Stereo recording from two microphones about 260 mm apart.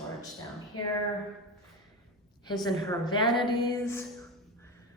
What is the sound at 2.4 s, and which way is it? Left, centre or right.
A woman's voice, centre.